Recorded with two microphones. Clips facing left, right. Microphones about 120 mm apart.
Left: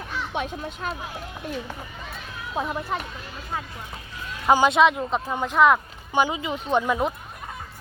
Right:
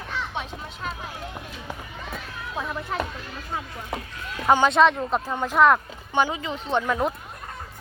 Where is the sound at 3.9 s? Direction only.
90° right.